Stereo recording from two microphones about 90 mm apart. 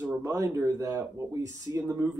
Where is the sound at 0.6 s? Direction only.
35° right (ahead or behind).